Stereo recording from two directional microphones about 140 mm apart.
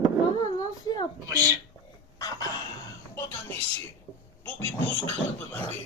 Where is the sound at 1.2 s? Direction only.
25° right (ahead or behind).